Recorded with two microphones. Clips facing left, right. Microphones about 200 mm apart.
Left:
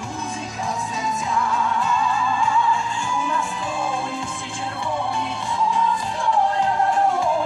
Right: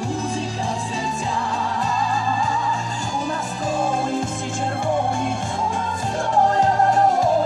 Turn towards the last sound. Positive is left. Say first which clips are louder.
# right 3 dB
turn(degrees=-40)  # may be behind; listen again after turning